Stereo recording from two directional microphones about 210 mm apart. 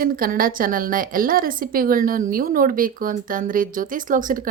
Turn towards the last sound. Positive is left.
turn(degrees=-40)  # may be behind; listen again after turning